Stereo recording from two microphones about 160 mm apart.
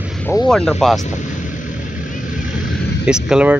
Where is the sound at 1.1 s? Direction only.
50° left (ahead or behind).